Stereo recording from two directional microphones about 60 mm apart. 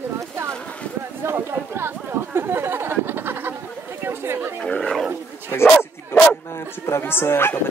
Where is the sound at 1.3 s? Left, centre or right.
Right.